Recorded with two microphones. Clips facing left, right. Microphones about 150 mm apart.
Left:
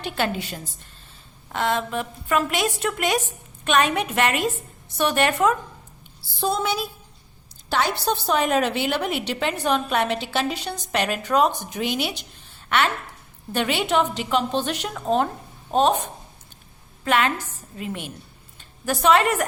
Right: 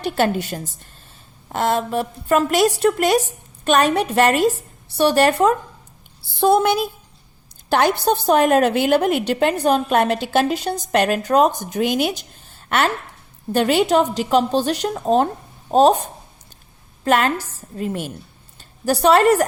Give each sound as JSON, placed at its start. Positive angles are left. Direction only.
{"t": 0.0, "sound": "a woman's voice", "side_deg": -40}
{"t": 6.4, "sound": "a woman's voice", "side_deg": -60}